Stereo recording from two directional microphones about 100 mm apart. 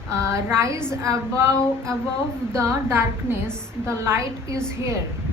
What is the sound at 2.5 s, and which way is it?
A woman's voice, 25° right (ahead or behind).